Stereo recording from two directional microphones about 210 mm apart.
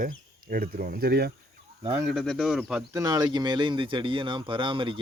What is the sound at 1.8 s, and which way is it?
Speech, 15° right (ahead or behind).